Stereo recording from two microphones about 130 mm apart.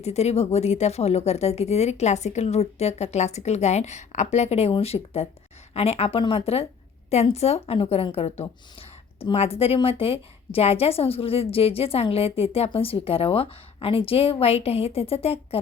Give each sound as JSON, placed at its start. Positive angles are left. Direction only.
{"t": 0.0, "sound": "a woman's voice", "side_deg": 55}